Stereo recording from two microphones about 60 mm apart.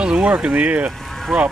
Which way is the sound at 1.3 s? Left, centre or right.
Centre.